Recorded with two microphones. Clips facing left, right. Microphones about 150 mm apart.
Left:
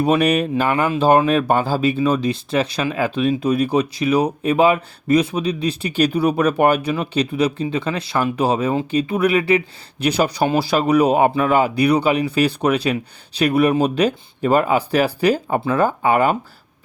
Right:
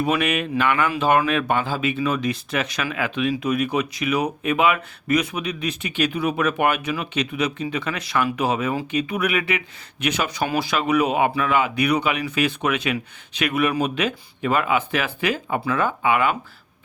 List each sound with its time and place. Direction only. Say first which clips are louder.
0.0 s speech: left 6 dB; 35° left (ahead or behind)